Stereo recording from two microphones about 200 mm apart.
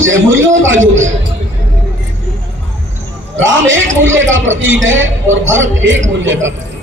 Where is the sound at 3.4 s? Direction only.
75° right (ahead or behind).